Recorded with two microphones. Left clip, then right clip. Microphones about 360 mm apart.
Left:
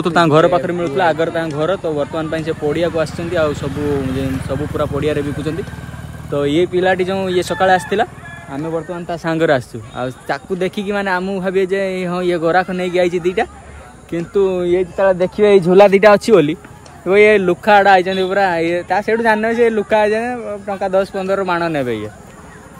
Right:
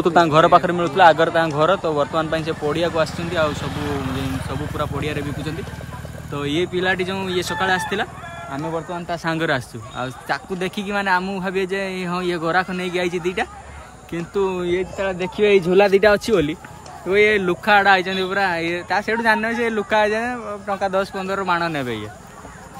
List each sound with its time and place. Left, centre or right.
0.3 s a man's voice: centre
3.7 s a man's voice: centre
4.4 s speech: centre
6.3 s speech: centre